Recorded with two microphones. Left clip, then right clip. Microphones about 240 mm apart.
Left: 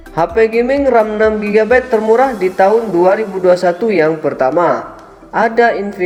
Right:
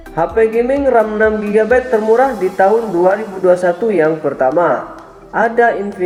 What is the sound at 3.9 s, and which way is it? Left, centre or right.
Speech, left.